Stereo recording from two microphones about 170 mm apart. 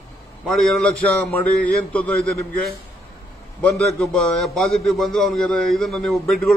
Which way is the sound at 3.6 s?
5° left (ahead or behind).